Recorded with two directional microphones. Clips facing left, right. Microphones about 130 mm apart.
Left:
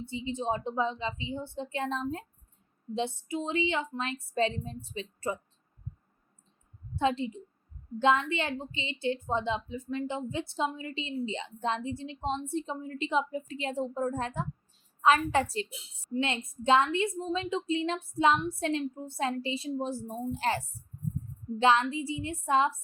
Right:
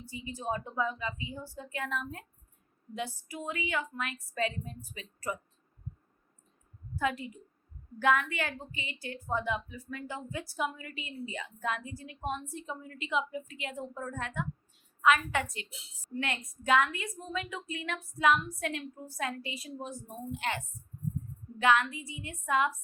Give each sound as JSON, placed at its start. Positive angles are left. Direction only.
{"t": 0.0, "sound": "a woman's voice", "side_deg": 25}
{"t": 6.9, "sound": "a woman's voice", "side_deg": 25}